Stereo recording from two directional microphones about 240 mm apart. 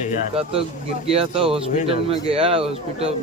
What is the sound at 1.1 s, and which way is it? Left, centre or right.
Speech, right.